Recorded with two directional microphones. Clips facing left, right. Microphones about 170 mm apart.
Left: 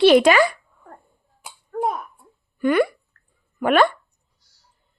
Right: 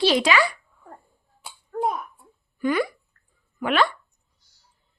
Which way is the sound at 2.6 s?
60° left (ahead or behind).